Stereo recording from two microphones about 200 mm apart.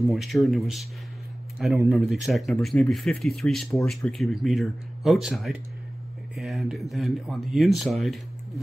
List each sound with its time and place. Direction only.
0.1 s speech: centre (ahead or behind)